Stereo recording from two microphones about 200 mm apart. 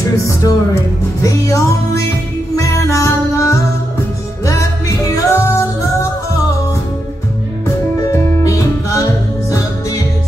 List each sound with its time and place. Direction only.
0.2 s music: 15° left (ahead or behind)
7.6 s music: 15° left (ahead or behind)